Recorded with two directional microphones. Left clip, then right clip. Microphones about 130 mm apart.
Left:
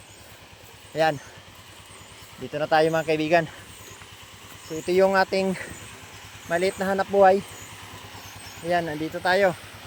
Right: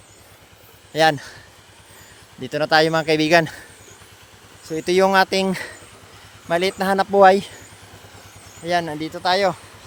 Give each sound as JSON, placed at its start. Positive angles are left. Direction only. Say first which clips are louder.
{"t": 2.5, "sound": "speech", "louder": "right 4 dB", "side_deg": -80}
{"t": 4.9, "sound": "speech", "louder": "right 4 dB", "side_deg": -70}
{"t": 6.5, "sound": "speech", "louder": "right 4 dB", "side_deg": -45}
{"t": 7.2, "sound": "speech", "louder": "right 5 dB", "side_deg": -65}
{"t": 8.6, "sound": "speech", "louder": "right 3 dB", "side_deg": -45}
{"t": 8.9, "sound": "speech", "louder": "right 3 dB", "side_deg": -25}